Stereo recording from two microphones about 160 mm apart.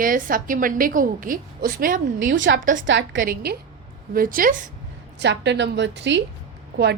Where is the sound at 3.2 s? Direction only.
80° right.